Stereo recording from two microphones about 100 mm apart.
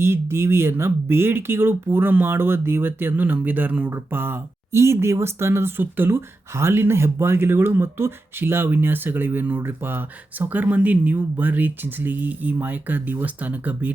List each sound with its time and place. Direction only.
0.0 s speech: 25° right (ahead or behind)